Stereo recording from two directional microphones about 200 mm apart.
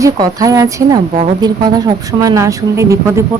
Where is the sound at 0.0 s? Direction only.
20° right (ahead or behind).